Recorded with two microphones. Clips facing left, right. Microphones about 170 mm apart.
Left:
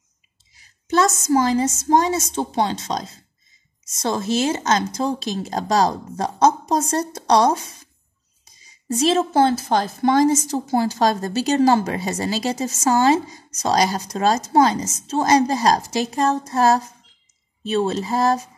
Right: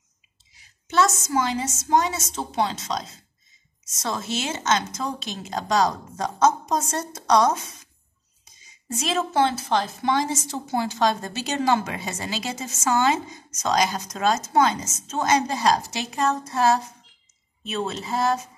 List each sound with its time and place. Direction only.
0.6 s a woman's voice: 40° left (ahead or behind)